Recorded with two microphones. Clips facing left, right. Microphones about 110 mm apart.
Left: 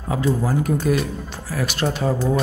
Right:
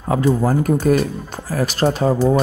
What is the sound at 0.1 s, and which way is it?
Speech, 45° right (ahead or behind).